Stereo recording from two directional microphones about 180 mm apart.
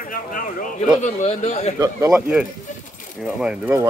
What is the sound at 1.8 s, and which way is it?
Speech, 15° right (ahead or behind).